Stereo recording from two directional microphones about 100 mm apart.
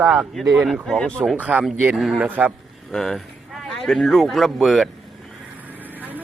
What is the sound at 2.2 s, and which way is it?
Speech, 15° right (ahead or behind).